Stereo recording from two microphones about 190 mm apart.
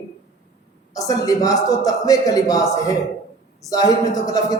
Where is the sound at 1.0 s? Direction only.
20° left (ahead or behind).